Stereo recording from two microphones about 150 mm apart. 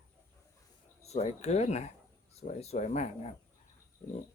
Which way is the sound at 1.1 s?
45° left (ahead or behind).